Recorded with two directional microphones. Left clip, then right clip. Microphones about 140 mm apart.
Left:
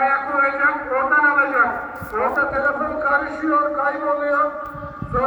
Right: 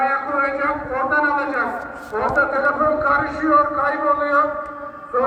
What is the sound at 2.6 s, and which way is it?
Speech, 35° right (ahead or behind).